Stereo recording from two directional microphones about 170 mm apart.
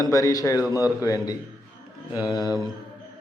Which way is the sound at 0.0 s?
20° left (ahead or behind).